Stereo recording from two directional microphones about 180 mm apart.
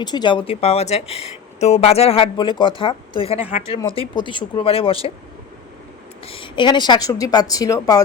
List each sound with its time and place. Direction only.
0.0 s speech: 25° left (ahead or behind)
6.2 s speech: 30° left (ahead or behind)